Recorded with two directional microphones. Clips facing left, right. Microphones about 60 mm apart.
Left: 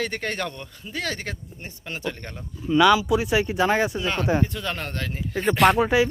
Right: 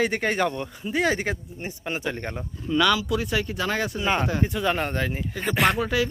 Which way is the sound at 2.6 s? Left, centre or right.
Centre.